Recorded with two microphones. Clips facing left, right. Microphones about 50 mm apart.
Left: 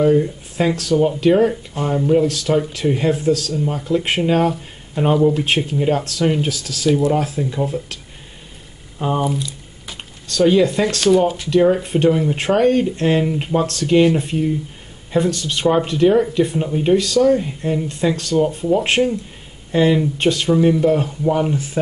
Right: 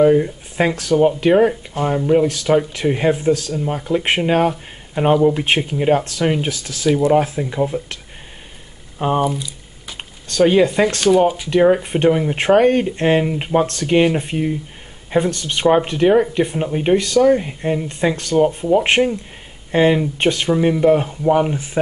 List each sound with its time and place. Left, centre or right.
0.0 s speech: right
9.2 s a sound: centre
10.3 s speech: right
11.0 s speech: centre
11.5 s speech: right